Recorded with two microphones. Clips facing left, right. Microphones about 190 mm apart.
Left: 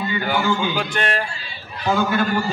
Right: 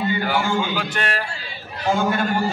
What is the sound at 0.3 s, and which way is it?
Speech, 5° right (ahead or behind).